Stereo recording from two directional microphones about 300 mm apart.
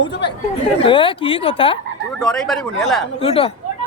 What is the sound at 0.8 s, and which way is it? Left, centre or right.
Speech, centre.